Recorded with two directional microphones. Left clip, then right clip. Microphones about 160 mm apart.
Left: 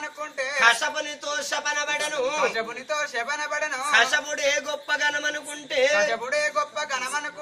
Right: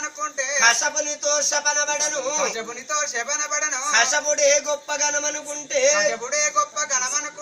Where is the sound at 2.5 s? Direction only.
30° left (ahead or behind).